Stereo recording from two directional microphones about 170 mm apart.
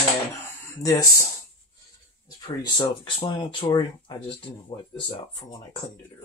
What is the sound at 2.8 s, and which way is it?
Speech, 30° left (ahead or behind).